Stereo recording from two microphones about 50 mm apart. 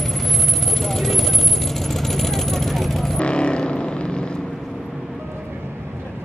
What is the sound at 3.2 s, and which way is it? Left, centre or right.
Vehicle, left.